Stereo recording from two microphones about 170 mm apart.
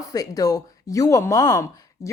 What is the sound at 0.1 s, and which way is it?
Speech, 20° left (ahead or behind).